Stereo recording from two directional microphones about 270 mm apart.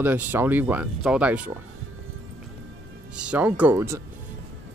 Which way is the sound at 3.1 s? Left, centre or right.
Centre.